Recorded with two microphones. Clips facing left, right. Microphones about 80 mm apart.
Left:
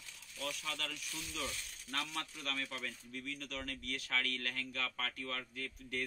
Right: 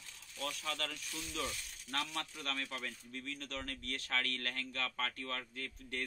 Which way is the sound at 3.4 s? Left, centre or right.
Right.